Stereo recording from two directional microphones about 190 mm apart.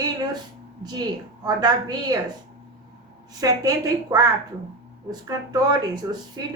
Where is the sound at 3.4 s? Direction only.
20° right (ahead or behind).